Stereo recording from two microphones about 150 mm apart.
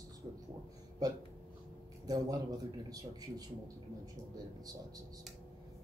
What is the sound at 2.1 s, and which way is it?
Speech, 25° right (ahead or behind).